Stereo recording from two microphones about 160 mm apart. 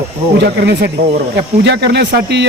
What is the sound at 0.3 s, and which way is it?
Speech, 90° right.